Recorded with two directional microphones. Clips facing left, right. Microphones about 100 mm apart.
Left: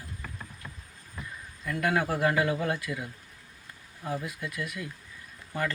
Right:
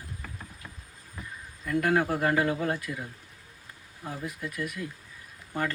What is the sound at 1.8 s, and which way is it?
Speech, 30° right (ahead or behind).